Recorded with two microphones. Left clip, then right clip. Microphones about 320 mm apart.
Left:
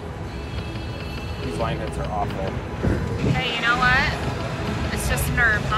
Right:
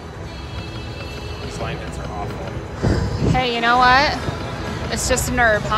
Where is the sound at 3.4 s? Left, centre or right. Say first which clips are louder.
Right 5 dB; centre.